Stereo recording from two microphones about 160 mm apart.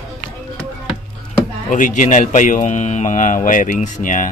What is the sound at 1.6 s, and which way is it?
Speech, 55° left (ahead or behind).